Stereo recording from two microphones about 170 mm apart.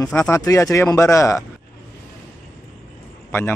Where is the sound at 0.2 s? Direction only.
20° left (ahead or behind).